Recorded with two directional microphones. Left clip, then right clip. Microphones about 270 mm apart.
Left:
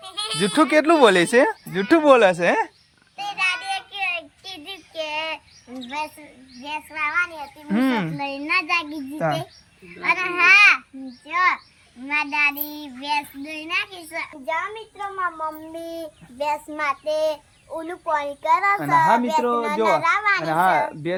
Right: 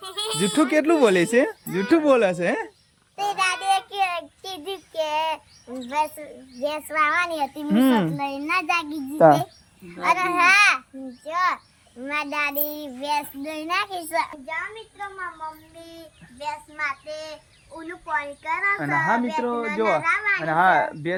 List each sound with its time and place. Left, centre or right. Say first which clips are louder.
0.1 s a child's voice: left 2 dB; centre
3.3 s child singing: right 1 dB; centre
6.7 s a child's voice: right 4 dB; right
7.7 s a child's voice: right 1 dB; centre
12.2 s a child's voice: left 5 dB; centre
14.4 s a child's voice: left 5 dB; centre